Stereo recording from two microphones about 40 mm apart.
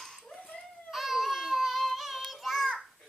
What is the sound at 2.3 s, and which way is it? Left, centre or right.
Child singing, centre.